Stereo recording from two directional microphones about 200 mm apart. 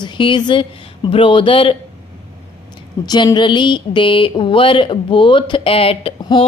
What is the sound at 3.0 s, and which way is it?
Speech, 20° left (ahead or behind).